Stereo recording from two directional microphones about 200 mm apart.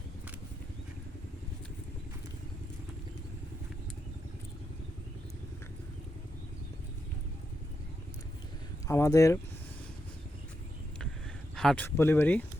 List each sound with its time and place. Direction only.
8.9 s speech: 15° left (ahead or behind)
11.5 s speech: 5° left (ahead or behind)